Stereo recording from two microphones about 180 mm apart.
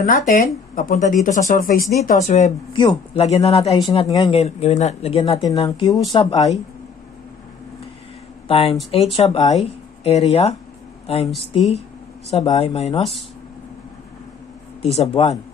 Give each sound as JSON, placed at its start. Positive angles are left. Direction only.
{"t": 0.0, "sound": "speech", "side_deg": 45}
{"t": 2.2, "sound": "speech", "side_deg": 40}
{"t": 2.7, "sound": "speech", "side_deg": 25}
{"t": 3.3, "sound": "speech", "side_deg": 35}
{"t": 8.5, "sound": "speech", "side_deg": 30}
{"t": 12.3, "sound": "speech", "side_deg": 35}
{"t": 14.8, "sound": "speech", "side_deg": 35}